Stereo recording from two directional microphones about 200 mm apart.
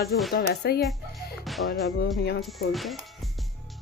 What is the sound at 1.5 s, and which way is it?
Music, centre (ahead or behind).